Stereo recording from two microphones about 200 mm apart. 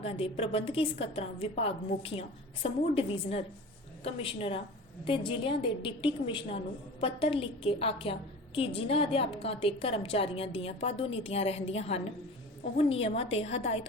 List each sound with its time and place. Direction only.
0.0 s a woman's voice: 30° left (ahead or behind)